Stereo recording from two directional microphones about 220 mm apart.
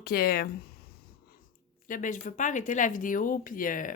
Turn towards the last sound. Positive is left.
turn(degrees=40)  # may be behind; listen again after turning